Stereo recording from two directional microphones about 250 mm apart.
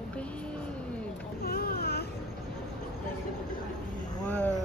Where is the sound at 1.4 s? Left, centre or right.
Left.